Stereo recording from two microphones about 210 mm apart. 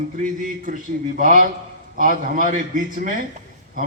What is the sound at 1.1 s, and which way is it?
A man's voice, 40° right (ahead or behind).